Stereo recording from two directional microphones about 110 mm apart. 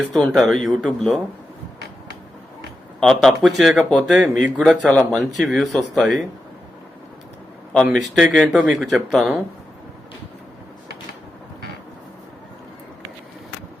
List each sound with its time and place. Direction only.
0.1 s speech: centre (ahead or behind)
3.0 s speech: 5° left (ahead or behind)
4.1 s speech: 10° right (ahead or behind)
4.9 s speech: 10° left (ahead or behind)
7.9 s speech: centre (ahead or behind)